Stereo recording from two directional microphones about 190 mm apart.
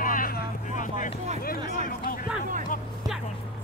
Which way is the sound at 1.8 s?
45° left (ahead or behind).